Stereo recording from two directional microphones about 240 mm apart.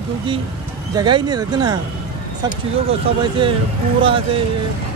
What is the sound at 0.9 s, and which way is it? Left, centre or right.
Speech, centre.